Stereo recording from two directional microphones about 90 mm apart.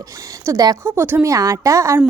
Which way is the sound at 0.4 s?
45° right (ahead or behind).